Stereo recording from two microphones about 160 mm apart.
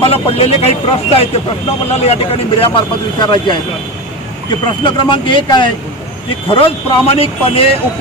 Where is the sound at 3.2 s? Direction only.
30° left (ahead or behind).